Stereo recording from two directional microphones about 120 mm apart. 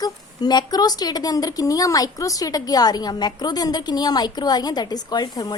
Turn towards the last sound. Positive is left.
turn(degrees=35)  # may be behind; listen again after turning